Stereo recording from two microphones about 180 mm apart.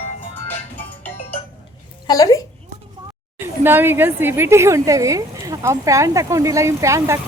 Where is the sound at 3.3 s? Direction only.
10° right (ahead or behind).